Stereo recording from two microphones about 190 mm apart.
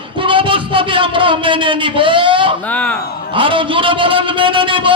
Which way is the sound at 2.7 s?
5° left (ahead or behind).